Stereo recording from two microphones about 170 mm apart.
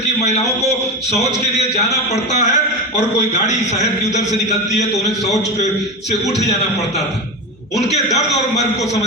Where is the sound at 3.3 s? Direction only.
40° left (ahead or behind).